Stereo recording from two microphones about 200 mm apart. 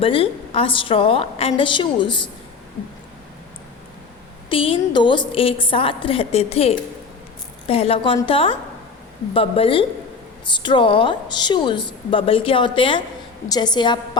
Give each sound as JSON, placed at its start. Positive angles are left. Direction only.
{"t": 0.0, "sound": "a woman's voice", "side_deg": 25}
{"t": 4.4, "sound": "a woman's voice", "side_deg": 25}